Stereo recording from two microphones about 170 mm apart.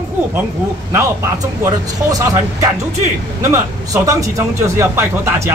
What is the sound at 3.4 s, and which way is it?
Speech, 15° right (ahead or behind).